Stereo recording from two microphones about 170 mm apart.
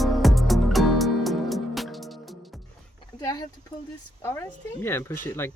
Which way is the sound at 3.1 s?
20° left (ahead or behind).